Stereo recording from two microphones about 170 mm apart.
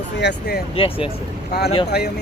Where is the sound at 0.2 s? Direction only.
80° left.